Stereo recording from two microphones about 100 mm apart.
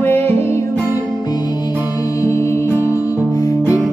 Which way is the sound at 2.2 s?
30° left (ahead or behind).